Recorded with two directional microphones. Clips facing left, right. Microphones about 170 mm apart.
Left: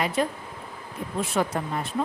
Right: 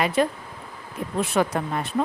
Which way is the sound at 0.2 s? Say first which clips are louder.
Right 4 dB; 75° right (ahead or behind).